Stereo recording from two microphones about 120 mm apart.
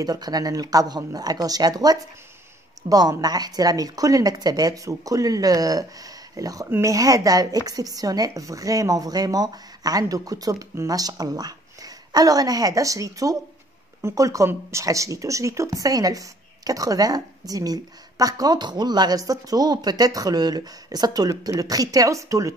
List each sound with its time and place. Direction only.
0.0 s speech: 35° right (ahead or behind)